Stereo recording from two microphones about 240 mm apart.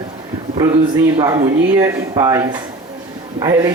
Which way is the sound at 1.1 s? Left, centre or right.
Centre.